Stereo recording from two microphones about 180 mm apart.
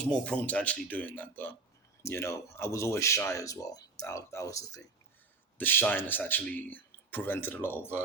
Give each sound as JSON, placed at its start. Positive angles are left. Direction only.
{"t": 0.3, "sound": "speech", "side_deg": 5}